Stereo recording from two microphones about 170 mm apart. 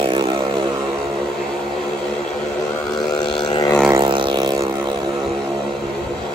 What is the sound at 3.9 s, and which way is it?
Vehicle, 25° right (ahead or behind).